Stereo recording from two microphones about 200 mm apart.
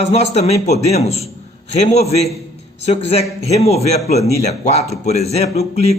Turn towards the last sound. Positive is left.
turn(degrees=30)  # may be behind; listen again after turning